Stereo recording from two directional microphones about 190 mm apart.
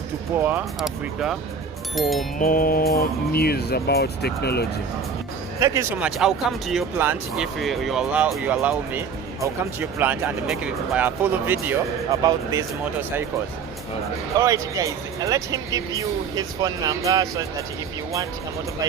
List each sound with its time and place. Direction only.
0.3 s speech: 10° right (ahead or behind)
2.4 s speech: 45° left (ahead or behind)
5.5 s speech: 15° right (ahead or behind)
6.0 s speech: 5° right (ahead or behind)
14.3 s speech: 20° right (ahead or behind)